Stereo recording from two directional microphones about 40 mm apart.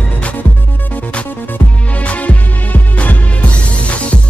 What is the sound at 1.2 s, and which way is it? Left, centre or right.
Music, left.